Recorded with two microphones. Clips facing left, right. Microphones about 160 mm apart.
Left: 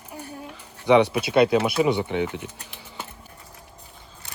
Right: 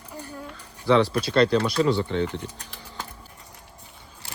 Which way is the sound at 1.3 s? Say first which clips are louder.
Left 2 dB; 10° left (ahead or behind).